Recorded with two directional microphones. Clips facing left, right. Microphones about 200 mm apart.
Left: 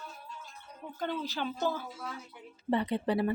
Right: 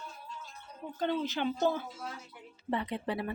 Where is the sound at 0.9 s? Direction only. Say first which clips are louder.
Right 3 dB; 20° right (ahead or behind).